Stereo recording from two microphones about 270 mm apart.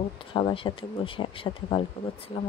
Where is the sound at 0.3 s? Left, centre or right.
Centre.